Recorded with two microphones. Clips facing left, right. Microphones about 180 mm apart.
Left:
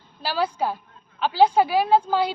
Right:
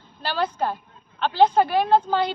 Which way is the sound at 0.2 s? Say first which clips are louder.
Even; 5° left (ahead or behind).